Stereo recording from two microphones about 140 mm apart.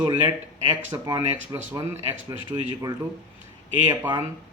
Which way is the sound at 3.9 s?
30° right (ahead or behind).